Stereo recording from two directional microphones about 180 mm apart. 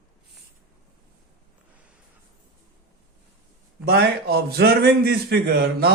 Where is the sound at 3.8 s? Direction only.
60° right (ahead or behind).